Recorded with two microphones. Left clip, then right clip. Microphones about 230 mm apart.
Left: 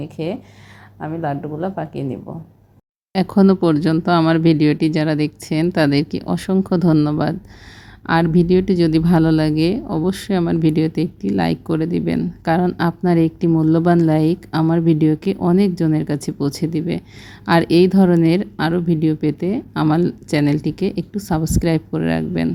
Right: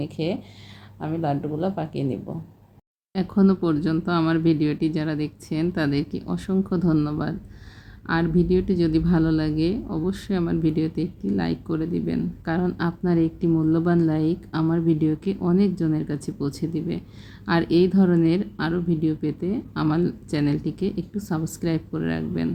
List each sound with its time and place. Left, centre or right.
0.0 s speech: centre
3.1 s a woman's voice: left